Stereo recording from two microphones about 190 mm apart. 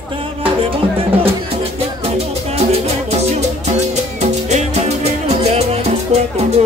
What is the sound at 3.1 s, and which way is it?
Music, 35° right (ahead or behind).